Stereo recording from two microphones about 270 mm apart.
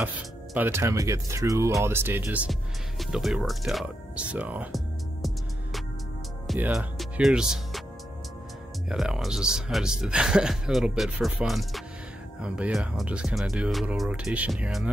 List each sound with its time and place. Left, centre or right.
0.6 s speech: centre
3.0 s music: centre
6.4 s speech: centre
8.8 s speech: centre